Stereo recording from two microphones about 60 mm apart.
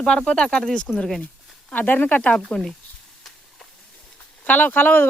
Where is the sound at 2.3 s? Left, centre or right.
Centre.